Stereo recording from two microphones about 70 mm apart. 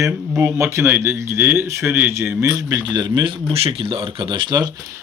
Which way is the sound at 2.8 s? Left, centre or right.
Right.